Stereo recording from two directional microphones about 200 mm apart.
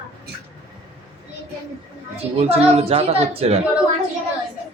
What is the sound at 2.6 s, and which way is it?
A woman's voice, 30° right (ahead or behind).